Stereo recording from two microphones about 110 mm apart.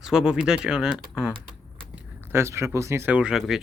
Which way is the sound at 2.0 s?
20° right (ahead or behind).